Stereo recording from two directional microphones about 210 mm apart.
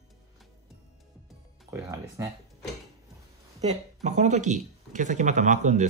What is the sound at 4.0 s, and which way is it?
Speech, 35° right (ahead or behind).